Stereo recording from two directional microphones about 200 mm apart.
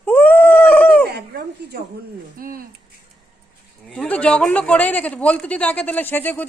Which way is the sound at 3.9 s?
5° left (ahead or behind).